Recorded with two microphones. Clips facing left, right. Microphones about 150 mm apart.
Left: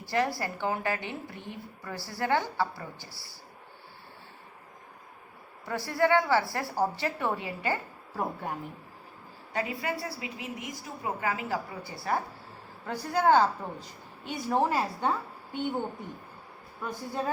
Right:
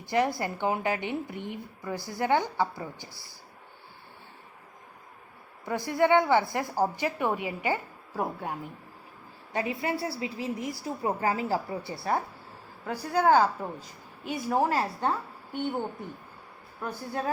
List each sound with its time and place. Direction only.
0.0 s a woman's voice: 20° right (ahead or behind)
5.6 s a woman's voice: 20° right (ahead or behind)
9.5 s a woman's voice: 25° right (ahead or behind)
12.8 s a woman's voice: 10° right (ahead or behind)
14.7 s a woman's voice: 10° left (ahead or behind)
16.8 s speech: 5° right (ahead or behind)